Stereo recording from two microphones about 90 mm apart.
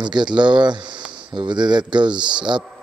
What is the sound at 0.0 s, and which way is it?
Speech, 55° right (ahead or behind).